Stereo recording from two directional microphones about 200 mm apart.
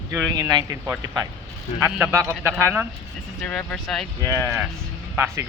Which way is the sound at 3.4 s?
5° left (ahead or behind).